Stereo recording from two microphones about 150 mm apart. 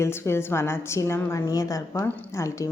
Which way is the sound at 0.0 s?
15° left (ahead or behind).